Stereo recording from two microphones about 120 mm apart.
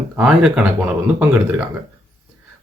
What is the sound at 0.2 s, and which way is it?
Speech, 5° right (ahead or behind).